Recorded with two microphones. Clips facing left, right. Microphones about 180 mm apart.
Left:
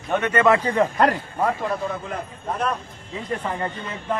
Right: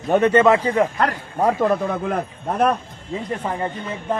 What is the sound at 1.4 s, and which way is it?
Speech, 35° right (ahead or behind).